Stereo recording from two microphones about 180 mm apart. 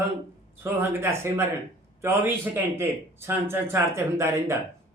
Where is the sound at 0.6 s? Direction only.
15° right (ahead or behind).